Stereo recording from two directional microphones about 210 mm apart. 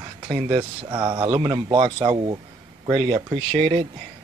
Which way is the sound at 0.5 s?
25° right (ahead or behind).